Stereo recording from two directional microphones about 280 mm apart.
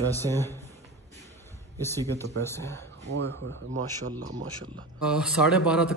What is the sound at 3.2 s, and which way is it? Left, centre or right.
Speech, right.